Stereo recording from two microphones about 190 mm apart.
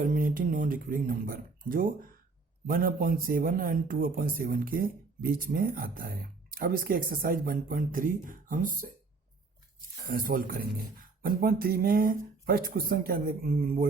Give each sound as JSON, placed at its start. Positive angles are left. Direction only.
{"t": 0.0, "sound": "speech", "side_deg": -45}
{"t": 10.1, "sound": "speech", "side_deg": -50}